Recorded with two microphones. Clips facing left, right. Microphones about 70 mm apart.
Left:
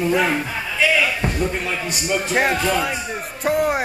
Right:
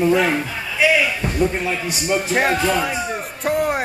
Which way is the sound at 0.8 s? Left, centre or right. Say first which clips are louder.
Right 3 dB; centre.